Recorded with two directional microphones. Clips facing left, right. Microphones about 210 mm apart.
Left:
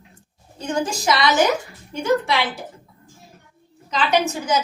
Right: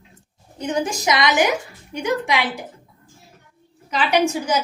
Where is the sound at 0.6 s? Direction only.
15° right (ahead or behind).